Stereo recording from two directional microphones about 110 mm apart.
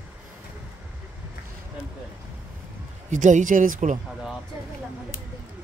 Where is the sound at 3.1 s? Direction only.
90° right.